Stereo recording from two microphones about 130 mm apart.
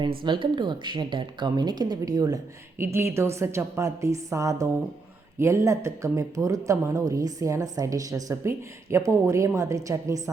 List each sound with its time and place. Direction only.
0.0 s speech: 40° right (ahead or behind)